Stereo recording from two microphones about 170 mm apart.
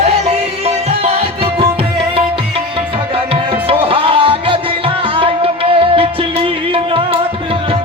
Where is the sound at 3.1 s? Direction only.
35° right (ahead or behind).